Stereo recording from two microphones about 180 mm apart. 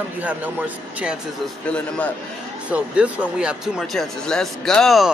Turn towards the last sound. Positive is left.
turn(degrees=0)  # may be behind; listen again after turning